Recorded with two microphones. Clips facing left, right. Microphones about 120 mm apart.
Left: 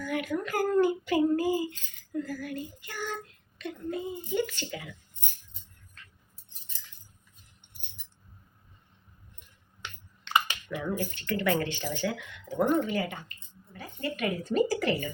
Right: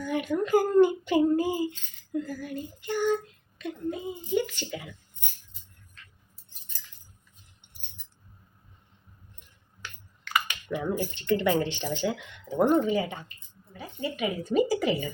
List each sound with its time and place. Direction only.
0.0 s a woman's voice: 20° right (ahead or behind)
9.8 s a sound: 25° left (ahead or behind)
10.7 s a woman's voice: 20° right (ahead or behind)